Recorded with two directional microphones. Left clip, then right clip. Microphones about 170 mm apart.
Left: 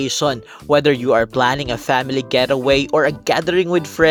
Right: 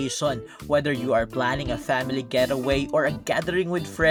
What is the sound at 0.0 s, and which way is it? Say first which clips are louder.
Speech: left 7 dB; 45° left (ahead or behind).